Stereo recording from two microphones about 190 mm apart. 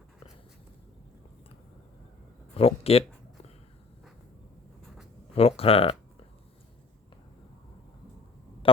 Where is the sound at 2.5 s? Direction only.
30° left (ahead or behind).